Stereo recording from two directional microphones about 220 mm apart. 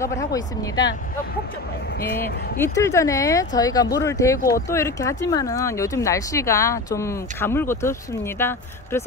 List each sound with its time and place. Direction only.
0.0 s speech: 15° left (ahead or behind)
2.6 s speech: 15° left (ahead or behind)